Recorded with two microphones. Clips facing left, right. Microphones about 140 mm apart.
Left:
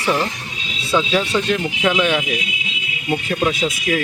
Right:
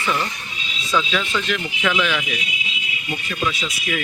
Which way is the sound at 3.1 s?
55° left (ahead or behind).